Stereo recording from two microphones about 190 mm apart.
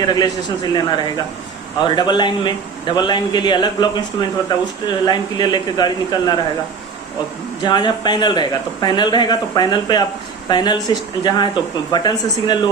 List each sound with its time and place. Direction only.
0.1 s a man's voice: 20° left (ahead or behind)
7.6 s a man's voice: 25° left (ahead or behind)